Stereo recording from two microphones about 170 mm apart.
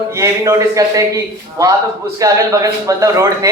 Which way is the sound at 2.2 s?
20° right (ahead or behind).